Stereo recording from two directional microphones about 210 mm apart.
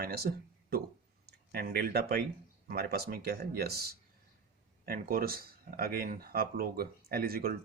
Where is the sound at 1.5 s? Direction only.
50° right (ahead or behind).